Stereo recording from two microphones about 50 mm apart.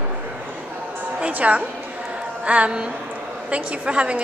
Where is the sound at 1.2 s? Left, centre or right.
Right.